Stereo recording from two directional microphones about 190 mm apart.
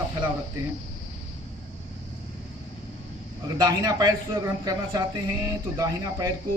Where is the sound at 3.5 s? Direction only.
20° right (ahead or behind).